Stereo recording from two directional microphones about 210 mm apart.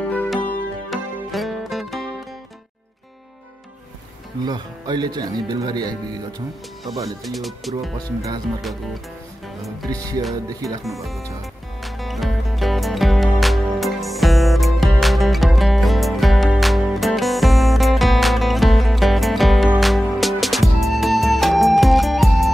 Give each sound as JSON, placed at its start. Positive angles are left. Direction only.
{"t": 0.0, "sound": "music", "side_deg": 5}
{"t": 4.5, "sound": "speech", "side_deg": -20}
{"t": 7.2, "sound": "speech", "side_deg": 0}
{"t": 10.3, "sound": "music", "side_deg": -15}
{"t": 10.8, "sound": "speech", "side_deg": 0}
{"t": 11.8, "sound": "music", "side_deg": 0}